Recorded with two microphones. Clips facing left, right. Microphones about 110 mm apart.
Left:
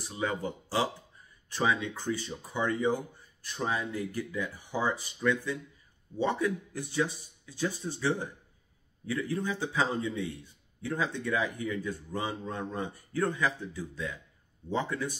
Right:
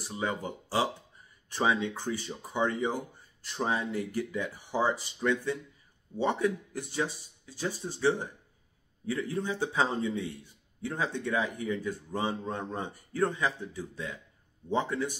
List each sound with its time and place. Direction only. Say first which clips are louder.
0.0 s speech: left 1 dB; 25° right (ahead or behind)